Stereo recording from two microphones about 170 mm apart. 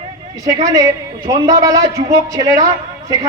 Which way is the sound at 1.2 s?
20° right (ahead or behind).